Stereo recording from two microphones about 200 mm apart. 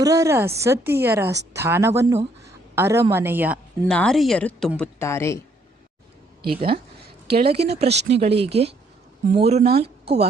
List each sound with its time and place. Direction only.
0.0 s a woman's voice: 15° right (ahead or behind)
3.8 s a woman's voice: 5° left (ahead or behind)
6.5 s speech: 25° right (ahead or behind)
7.9 s speech: 60° right (ahead or behind)
8.1 s speech: 30° right (ahead or behind)